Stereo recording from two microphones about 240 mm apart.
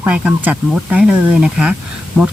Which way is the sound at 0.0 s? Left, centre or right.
Centre.